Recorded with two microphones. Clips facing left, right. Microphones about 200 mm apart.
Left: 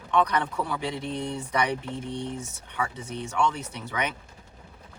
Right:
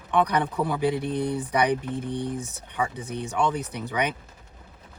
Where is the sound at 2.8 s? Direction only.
15° right (ahead or behind).